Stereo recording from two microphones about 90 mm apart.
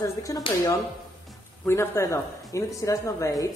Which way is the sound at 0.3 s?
35° left (ahead or behind).